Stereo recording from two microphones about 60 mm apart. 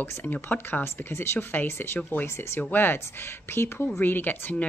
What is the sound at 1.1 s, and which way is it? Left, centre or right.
A woman's voice, left.